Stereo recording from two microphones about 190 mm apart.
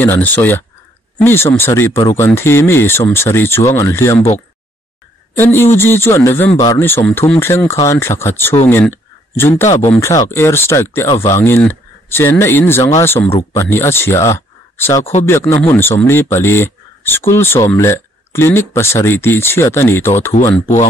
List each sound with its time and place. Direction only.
0.0 s speech: 10° left (ahead or behind)
5.3 s speech: 10° left (ahead or behind)
9.7 s speech: 35° left (ahead or behind)
9.9 s speech: 15° left (ahead or behind)